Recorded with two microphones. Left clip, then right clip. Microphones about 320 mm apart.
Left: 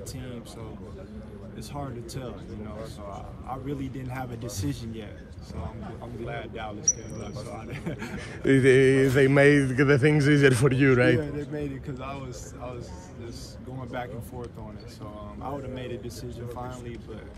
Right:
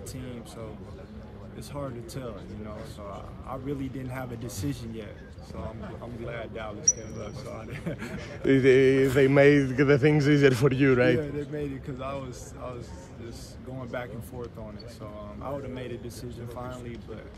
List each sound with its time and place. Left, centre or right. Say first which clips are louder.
1.7 s speech: right 1 dB; centre
6.2 s speech: left 1 dB; centre
8.2 s speech: left 1 dB; left
11.1 s speech: even; centre
13.7 s speech: even; centre
15.4 s speech: left 1 dB; centre